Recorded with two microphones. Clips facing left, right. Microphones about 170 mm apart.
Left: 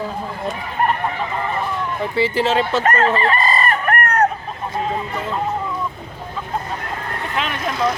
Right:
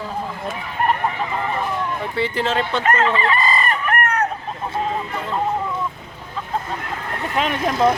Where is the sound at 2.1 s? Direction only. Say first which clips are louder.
Left 4 dB; centre (ahead or behind).